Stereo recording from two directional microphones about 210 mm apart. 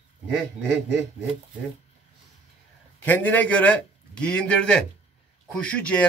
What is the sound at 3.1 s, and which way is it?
A man's voice, 10° left (ahead or behind).